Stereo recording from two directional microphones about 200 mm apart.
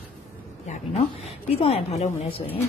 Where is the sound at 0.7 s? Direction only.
30° left (ahead or behind).